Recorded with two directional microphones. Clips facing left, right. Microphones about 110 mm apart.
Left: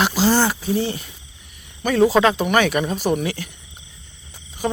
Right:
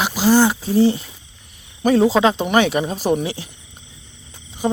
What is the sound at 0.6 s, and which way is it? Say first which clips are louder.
Speech: right 6 dB; 30° right (ahead or behind).